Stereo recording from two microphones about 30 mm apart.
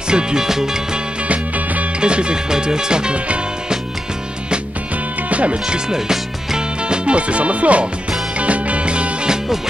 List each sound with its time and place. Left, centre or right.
0.1 s music: right
2.0 s music: right
2.5 s music: right
5.3 s speech: right
5.9 s music: centre
6.9 s speech: right
8.4 s music: right